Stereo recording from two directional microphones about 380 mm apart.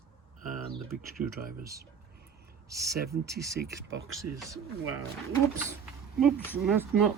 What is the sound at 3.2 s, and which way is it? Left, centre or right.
Speech, centre.